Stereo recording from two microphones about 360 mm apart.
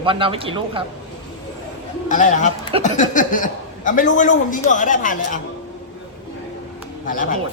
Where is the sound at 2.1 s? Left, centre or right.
Left.